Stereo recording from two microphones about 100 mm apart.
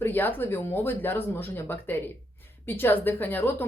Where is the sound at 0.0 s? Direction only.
20° left (ahead or behind).